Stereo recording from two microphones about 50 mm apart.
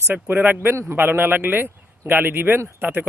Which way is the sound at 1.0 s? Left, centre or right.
Right.